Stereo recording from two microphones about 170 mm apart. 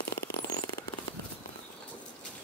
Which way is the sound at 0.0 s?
70° left (ahead or behind).